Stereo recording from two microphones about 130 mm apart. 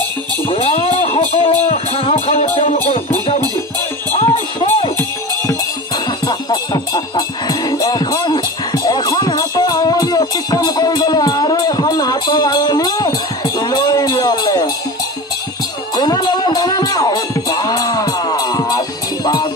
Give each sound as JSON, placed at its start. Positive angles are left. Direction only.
{"t": 0.5, "sound": "music", "side_deg": 45}
{"t": 4.2, "sound": "music", "side_deg": 45}
{"t": 6.2, "sound": "music", "side_deg": 30}
{"t": 16.0, "sound": "music", "side_deg": 30}